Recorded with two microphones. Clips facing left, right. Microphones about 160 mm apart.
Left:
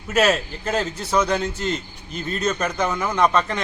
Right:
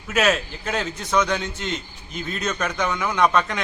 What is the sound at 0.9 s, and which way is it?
Speech, 30° left (ahead or behind).